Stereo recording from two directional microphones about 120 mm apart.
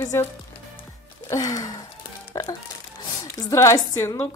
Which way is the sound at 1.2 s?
30° left (ahead or behind).